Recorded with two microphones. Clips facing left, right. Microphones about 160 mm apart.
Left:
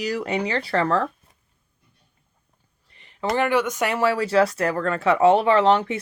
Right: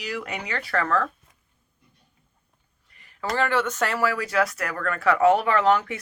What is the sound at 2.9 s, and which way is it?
Speech, 25° left (ahead or behind).